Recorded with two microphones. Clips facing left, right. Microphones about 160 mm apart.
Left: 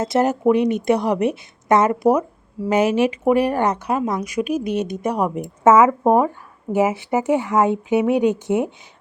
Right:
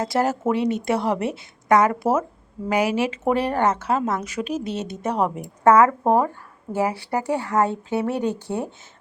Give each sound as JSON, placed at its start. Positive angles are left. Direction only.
{"t": 0.0, "sound": "speech", "side_deg": 20}